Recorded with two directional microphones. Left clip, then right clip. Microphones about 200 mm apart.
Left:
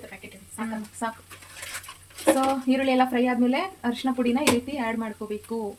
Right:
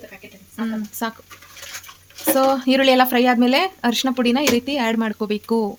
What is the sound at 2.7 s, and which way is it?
Speech, 60° right (ahead or behind).